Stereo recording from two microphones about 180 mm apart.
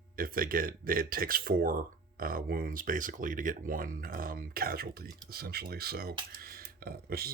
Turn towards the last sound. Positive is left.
turn(degrees=-60)  # may be behind; listen again after turning